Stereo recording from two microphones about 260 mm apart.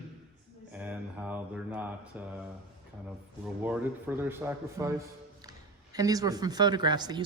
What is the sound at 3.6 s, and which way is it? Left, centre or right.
Speech, centre.